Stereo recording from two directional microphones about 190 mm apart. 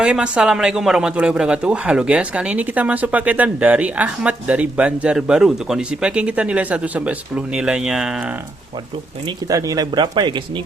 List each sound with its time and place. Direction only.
0.0 s speech: 5° right (ahead or behind)
9.2 s speech: 20° right (ahead or behind)